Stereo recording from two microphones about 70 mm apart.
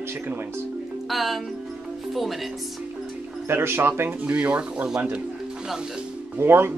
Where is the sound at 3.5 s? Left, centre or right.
Right.